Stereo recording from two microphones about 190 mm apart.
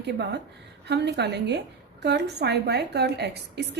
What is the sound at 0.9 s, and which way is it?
A woman's voice, 60° right (ahead or behind).